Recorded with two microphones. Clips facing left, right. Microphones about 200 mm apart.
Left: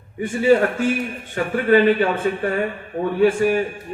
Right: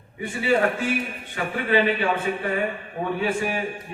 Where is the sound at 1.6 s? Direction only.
45° left (ahead or behind).